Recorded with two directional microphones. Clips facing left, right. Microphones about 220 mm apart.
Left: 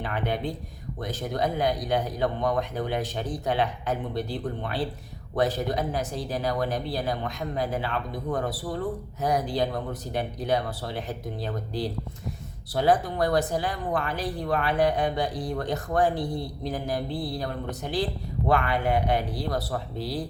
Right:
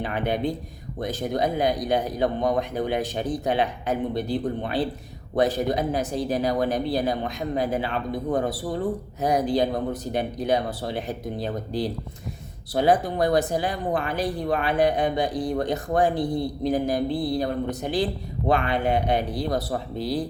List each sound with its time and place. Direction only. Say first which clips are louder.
0.0 s speech: right 4 dB; 15° right (ahead or behind)